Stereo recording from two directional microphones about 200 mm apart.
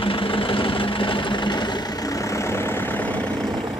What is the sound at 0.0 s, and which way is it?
Engine, 25° left (ahead or behind).